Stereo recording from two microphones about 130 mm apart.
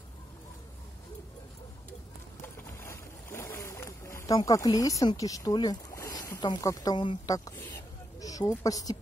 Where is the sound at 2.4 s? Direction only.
20° left (ahead or behind).